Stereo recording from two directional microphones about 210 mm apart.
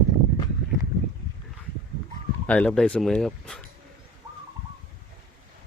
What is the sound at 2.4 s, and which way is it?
Speech, 5° left (ahead or behind).